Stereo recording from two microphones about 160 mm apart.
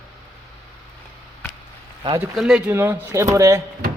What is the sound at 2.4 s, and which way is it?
Speech, 5° right (ahead or behind).